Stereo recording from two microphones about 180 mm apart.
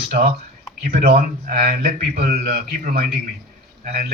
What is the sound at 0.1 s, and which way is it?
A man's voice, 55° right (ahead or behind).